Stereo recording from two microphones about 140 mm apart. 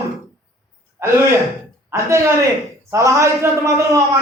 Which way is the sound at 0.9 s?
20° right (ahead or behind).